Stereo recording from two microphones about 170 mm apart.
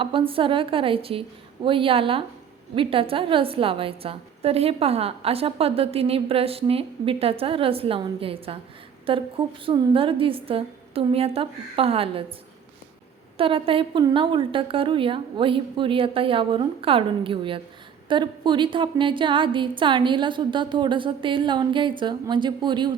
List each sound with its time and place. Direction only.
0.0 s a woman's voice: 30° right (ahead or behind)
13.3 s a woman's voice: 30° right (ahead or behind)